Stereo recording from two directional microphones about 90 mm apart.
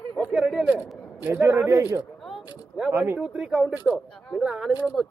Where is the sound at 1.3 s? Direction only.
35° right (ahead or behind).